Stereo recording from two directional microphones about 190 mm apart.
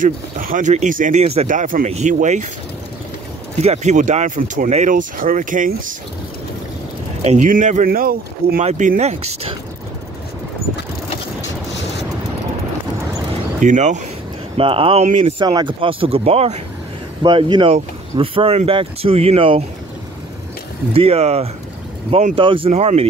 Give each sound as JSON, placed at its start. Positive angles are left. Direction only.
{"t": 0.0, "sound": "speech", "side_deg": -45}
{"t": 3.6, "sound": "speech", "side_deg": -35}
{"t": 7.2, "sound": "speech", "side_deg": -40}
{"t": 8.5, "sound": "speech", "side_deg": -40}
{"t": 13.6, "sound": "speech", "side_deg": -40}
{"t": 15.3, "sound": "speech", "side_deg": -20}
{"t": 17.2, "sound": "speech", "side_deg": -25}
{"t": 20.9, "sound": "speech", "side_deg": -30}